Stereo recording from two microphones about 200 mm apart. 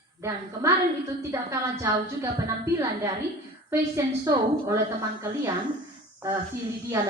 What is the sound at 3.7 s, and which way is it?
A woman's voice, 20° right (ahead or behind).